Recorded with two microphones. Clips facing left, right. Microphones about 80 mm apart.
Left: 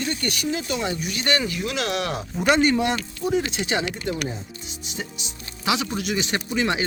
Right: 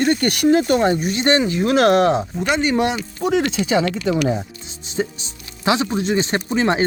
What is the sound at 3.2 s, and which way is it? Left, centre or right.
Speech, right.